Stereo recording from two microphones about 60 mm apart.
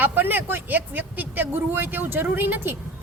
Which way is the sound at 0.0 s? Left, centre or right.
Right.